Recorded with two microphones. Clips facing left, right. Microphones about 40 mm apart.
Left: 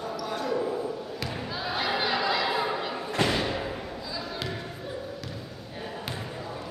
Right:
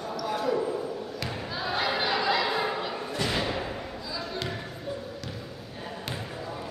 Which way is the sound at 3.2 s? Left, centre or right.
Left.